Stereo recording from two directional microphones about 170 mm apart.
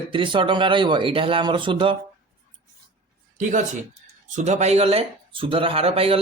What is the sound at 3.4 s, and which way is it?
Speech, 50° right (ahead or behind).